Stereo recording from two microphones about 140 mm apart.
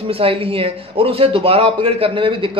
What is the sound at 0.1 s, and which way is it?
A man's voice, 40° right (ahead or behind).